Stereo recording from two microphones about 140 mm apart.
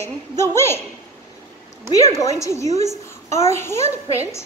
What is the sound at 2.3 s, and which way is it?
A woman's voice, 20° left (ahead or behind).